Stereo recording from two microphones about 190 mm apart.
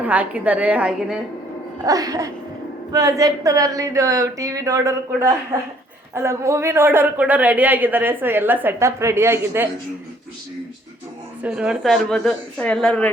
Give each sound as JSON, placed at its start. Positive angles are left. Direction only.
{"t": 0.0, "sound": "speech", "side_deg": -10}
{"t": 1.8, "sound": "speech", "side_deg": -20}
{"t": 11.4, "sound": "a woman's voice", "side_deg": -5}